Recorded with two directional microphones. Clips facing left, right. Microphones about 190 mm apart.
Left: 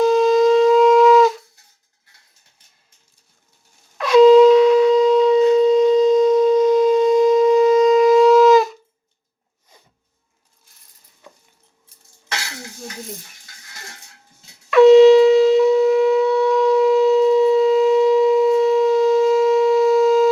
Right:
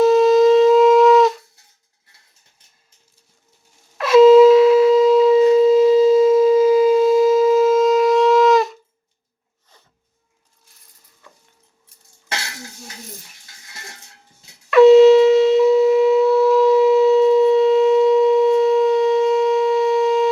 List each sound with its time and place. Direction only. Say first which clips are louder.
0.0 s shofar: right 2 dB; centre (ahead or behind)
3.9 s shofar: right 1 dB; centre (ahead or behind)
11.2 s a sound: left 4 dB; 20° left (ahead or behind)
14.7 s shofar: even; centre (ahead or behind)